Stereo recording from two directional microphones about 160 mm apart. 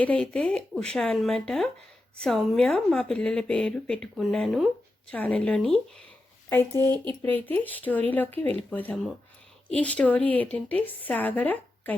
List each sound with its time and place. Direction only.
0.0 s a woman's voice: 5° left (ahead or behind)
6.9 s speech: 30° right (ahead or behind)
7.2 s a woman's voice: 10° left (ahead or behind)